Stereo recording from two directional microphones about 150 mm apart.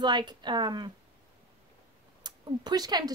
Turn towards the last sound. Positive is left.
turn(degrees=-25)  # may be behind; listen again after turning